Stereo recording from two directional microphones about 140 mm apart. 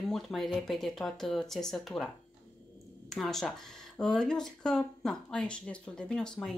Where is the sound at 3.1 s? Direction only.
Centre (ahead or behind).